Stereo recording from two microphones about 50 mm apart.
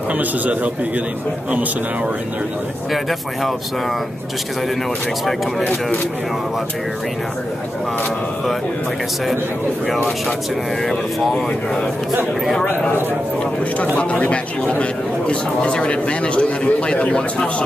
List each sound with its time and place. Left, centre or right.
0.1 s a man's voice: right
2.9 s speech: centre
5.6 s speech: left
13.9 s a man's voice: left